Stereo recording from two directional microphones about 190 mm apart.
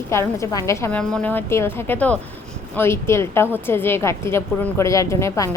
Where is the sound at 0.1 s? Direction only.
15° left (ahead or behind).